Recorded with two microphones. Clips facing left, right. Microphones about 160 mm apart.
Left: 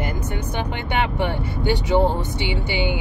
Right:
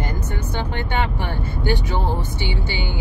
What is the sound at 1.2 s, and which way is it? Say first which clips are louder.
Speech: left 3 dB; 20° left (ahead or behind).